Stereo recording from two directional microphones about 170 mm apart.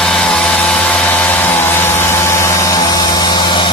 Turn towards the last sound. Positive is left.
turn(degrees=25)  # may be behind; listen again after turning